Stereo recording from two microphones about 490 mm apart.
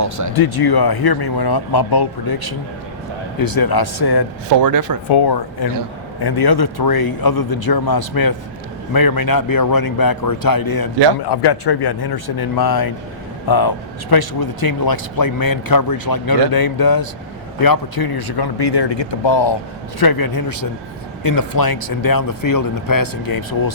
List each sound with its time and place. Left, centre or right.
0.0 s speech: right
0.3 s speech: left
4.4 s speech: right
5.0 s speech: left
20.0 s speech: left